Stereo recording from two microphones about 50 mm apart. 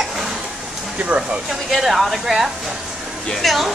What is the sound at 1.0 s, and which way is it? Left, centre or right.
Speech, right.